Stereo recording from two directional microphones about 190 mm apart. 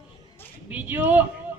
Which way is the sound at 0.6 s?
10° right (ahead or behind).